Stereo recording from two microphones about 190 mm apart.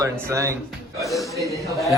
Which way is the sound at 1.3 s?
15° right (ahead or behind).